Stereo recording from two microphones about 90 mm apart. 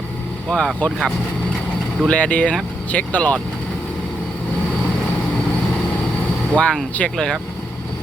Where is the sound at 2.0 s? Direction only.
15° left (ahead or behind).